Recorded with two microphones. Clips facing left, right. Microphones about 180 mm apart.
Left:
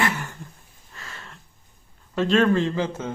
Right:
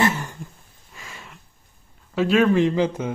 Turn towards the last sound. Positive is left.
turn(degrees=-15)  # may be behind; listen again after turning